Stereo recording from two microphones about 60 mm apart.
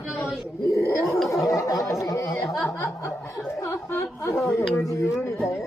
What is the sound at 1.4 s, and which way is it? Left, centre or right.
Speech, left.